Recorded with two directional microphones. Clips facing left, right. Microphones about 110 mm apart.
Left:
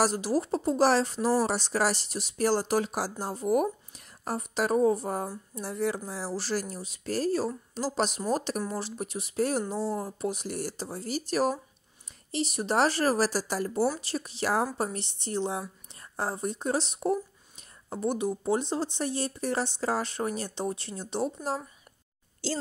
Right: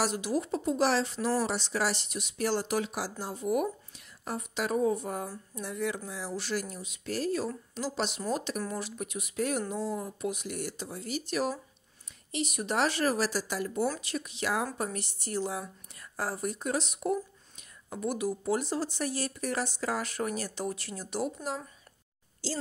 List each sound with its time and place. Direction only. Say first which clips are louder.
0.0 s speech: left 4 dB; 40° left (ahead or behind)
22.4 s a woman's voice: left 3 dB; 65° left (ahead or behind)